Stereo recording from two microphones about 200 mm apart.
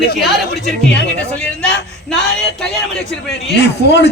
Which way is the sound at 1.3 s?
5° left (ahead or behind).